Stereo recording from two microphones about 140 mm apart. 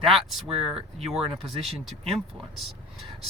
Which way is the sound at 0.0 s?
Centre (ahead or behind).